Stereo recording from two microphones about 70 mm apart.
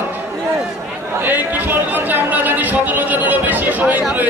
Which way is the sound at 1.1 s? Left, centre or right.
Right.